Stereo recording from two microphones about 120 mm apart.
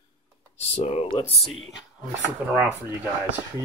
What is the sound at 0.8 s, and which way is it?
Speech, 65° left (ahead or behind).